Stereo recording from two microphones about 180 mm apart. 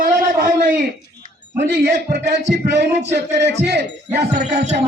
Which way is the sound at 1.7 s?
70° right (ahead or behind).